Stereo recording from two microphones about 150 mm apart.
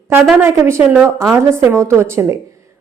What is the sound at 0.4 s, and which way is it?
A woman's voice, 15° right (ahead or behind).